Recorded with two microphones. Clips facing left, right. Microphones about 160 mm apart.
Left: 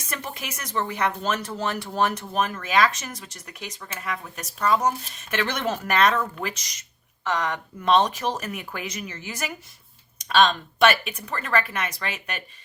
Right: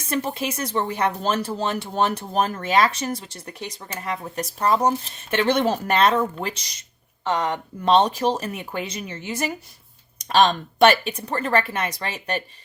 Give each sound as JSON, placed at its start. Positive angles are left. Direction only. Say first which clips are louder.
{"t": 0.1, "sound": "speech", "louder": "right 9 dB", "side_deg": -30}